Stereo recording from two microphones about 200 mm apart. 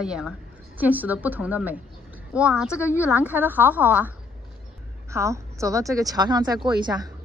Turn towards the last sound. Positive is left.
turn(degrees=-20)  # may be behind; listen again after turning